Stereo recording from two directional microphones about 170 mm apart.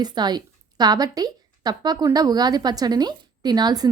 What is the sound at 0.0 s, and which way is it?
A woman's voice, 25° right (ahead or behind).